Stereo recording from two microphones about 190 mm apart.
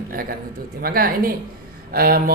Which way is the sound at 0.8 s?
50° right (ahead or behind).